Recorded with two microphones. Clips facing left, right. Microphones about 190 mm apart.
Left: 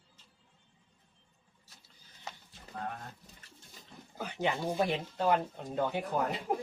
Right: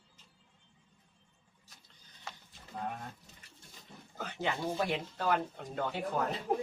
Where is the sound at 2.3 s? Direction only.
20° left (ahead or behind).